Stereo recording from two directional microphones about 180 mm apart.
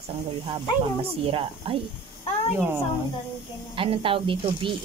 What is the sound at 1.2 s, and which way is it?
Speech, 30° right (ahead or behind).